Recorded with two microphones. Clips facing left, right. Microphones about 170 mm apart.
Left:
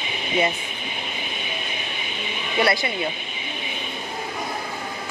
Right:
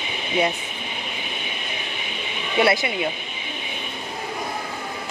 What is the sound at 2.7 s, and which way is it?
Speech, 20° right (ahead or behind).